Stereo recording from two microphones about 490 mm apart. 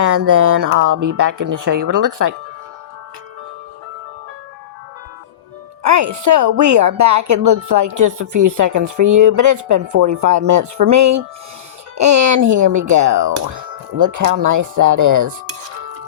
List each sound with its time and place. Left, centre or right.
0.0 s speech: right
5.8 s speech: right